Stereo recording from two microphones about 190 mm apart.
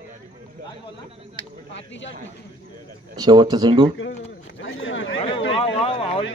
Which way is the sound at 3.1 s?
20° right (ahead or behind).